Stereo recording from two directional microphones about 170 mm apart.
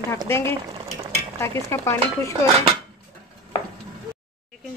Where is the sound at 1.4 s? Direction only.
15° left (ahead or behind).